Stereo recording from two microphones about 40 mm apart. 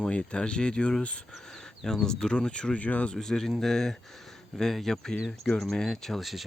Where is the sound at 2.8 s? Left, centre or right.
Left.